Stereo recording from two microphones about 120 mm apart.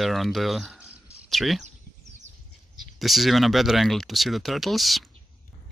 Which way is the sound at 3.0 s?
Centre (ahead or behind).